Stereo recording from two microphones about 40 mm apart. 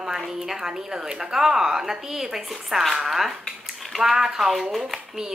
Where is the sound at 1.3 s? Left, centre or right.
Centre.